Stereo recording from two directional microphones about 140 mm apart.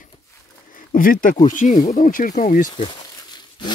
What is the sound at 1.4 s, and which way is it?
Speech, 65° left (ahead or behind).